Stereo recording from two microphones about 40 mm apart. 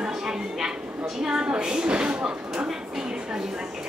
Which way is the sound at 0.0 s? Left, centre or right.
Centre.